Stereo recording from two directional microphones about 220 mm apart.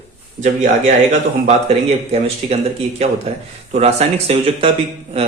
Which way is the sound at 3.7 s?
30° right (ahead or behind).